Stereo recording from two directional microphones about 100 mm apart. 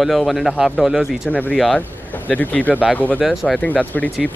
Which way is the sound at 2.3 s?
15° left (ahead or behind).